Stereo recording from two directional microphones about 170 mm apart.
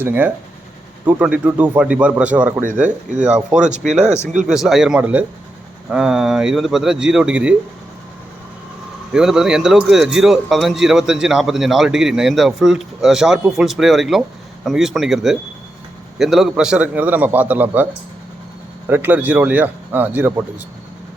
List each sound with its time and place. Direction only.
0.0 s a man's voice: 10° right (ahead or behind)
2.8 s speech: 45° right (ahead or behind)
3.2 s speech: 5° right (ahead or behind)
9.1 s a man's voice: 5° right (ahead or behind)
18.9 s a man's voice: 10° right (ahead or behind)